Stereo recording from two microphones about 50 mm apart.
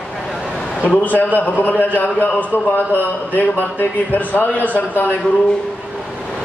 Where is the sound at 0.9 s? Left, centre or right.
Left.